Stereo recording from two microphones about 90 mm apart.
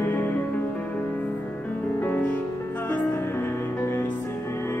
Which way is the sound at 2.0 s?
15° left (ahead or behind).